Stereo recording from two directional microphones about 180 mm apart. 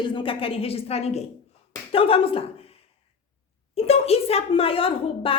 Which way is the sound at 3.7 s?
35° left (ahead or behind).